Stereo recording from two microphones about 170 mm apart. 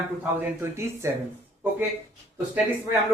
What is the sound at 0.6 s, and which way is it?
Speech, 15° right (ahead or behind).